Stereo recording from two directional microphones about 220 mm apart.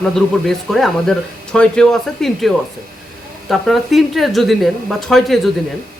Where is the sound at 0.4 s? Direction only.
Centre (ahead or behind).